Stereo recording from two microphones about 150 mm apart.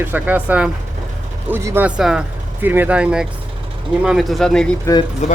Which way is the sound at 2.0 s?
5° right (ahead or behind).